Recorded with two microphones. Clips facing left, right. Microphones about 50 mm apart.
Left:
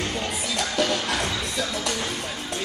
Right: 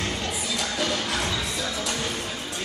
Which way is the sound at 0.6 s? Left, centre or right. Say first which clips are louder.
Left 5 dB; left.